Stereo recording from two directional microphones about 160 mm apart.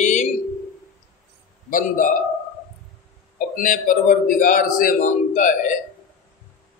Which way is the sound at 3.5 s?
60° left (ahead or behind).